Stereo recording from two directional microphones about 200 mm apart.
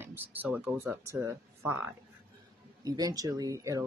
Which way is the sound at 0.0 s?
10° right (ahead or behind).